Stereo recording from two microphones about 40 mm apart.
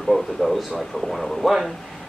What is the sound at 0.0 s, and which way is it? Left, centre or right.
Speech, centre.